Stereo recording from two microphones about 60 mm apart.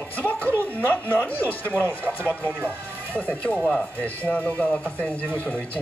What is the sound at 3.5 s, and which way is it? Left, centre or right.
Speech, left.